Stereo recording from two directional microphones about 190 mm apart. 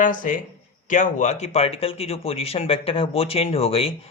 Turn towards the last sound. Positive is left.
turn(degrees=30)  # may be behind; listen again after turning